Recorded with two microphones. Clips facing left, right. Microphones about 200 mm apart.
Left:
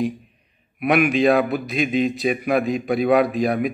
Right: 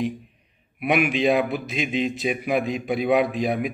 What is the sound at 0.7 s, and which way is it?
Speech, 5° right (ahead or behind).